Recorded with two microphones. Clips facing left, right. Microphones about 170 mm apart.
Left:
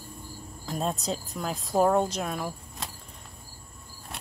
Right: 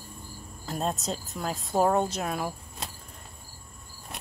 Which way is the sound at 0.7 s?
Centre (ahead or behind).